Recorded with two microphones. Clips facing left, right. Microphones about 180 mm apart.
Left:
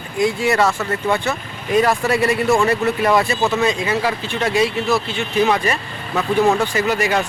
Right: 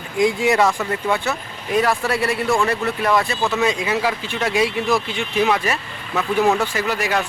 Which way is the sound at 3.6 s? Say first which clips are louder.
Left 1 dB; 10° right (ahead or behind).